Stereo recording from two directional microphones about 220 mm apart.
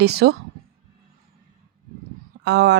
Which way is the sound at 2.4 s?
50° right (ahead or behind).